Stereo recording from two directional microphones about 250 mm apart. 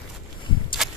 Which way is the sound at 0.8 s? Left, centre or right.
Centre.